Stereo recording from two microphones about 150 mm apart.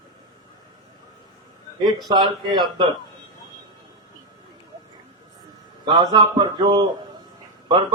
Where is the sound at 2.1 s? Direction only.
30° right (ahead or behind).